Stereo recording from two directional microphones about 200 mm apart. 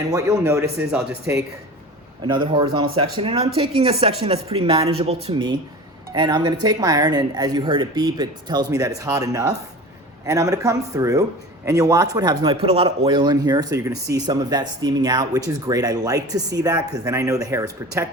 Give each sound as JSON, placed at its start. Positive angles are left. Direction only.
{"t": 0.1, "sound": "speech", "side_deg": -15}
{"t": 0.8, "sound": "speech", "side_deg": -5}
{"t": 2.2, "sound": "speech", "side_deg": -20}